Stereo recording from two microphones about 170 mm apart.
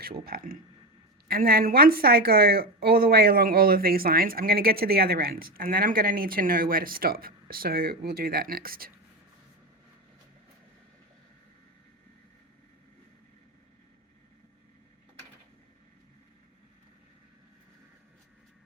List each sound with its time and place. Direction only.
0.0 s speech: 60° right (ahead or behind)